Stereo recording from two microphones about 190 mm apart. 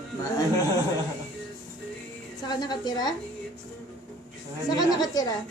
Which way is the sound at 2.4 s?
20° left (ahead or behind).